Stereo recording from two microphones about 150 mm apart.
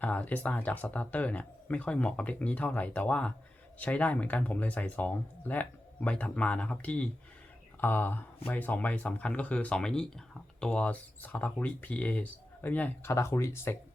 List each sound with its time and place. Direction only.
0.0 s speech: 10° left (ahead or behind)